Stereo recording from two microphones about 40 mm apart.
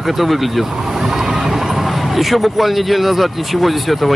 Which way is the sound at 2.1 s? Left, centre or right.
Centre.